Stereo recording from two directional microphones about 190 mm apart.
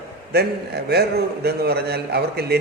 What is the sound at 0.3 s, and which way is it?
A man's voice, 55° right (ahead or behind).